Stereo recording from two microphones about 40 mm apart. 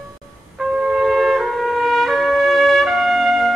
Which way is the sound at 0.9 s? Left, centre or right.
Centre.